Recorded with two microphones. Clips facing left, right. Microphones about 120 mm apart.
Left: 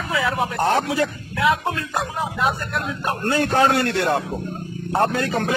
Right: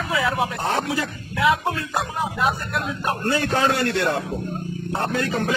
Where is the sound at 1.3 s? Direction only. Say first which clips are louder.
Even; centre (ahead or behind).